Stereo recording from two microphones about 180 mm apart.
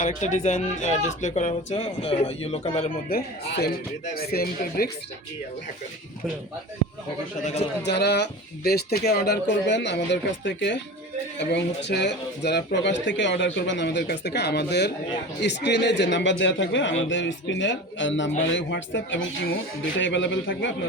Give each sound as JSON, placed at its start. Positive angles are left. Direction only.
{"t": 0.0, "sound": "speech", "side_deg": 40}
{"t": 3.1, "sound": "speech", "side_deg": 60}
{"t": 7.9, "sound": "speech", "side_deg": 70}
{"t": 20.0, "sound": "speech", "side_deg": 90}